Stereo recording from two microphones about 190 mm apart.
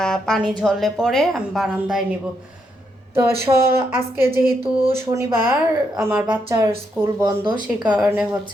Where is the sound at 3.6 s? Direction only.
10° right (ahead or behind).